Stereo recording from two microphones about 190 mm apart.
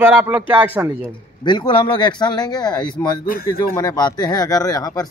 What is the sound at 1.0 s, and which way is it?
Speech, 25° left (ahead or behind).